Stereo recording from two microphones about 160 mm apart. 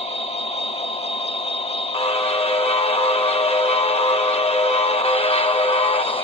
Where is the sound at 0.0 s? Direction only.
40° left (ahead or behind).